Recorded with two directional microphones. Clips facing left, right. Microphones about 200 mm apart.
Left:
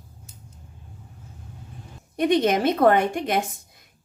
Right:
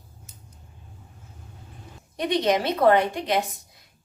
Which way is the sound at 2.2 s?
50° left (ahead or behind).